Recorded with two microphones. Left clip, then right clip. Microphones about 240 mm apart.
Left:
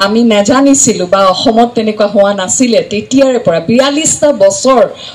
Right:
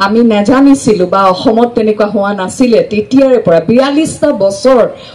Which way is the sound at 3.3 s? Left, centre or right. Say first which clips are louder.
Right 2 dB; left.